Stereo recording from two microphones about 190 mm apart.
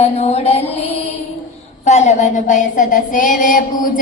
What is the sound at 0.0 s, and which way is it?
Music, 35° left (ahead or behind).